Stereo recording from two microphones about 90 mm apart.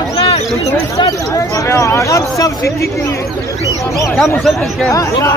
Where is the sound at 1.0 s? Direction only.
40° left (ahead or behind).